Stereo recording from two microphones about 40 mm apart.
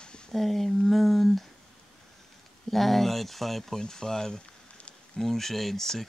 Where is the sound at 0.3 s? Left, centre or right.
Centre.